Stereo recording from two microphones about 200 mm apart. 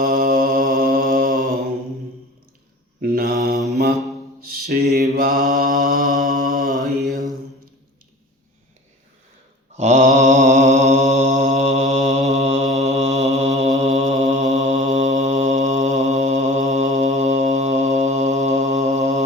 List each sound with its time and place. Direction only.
0.0 s mantra: 35° right (ahead or behind)
3.0 s mantra: 50° right (ahead or behind)
4.4 s a sound: 50° right (ahead or behind)
5.1 s mantra: 45° right (ahead or behind)
6.7 s mantra: 15° right (ahead or behind)
9.7 s mantra: 35° right (ahead or behind)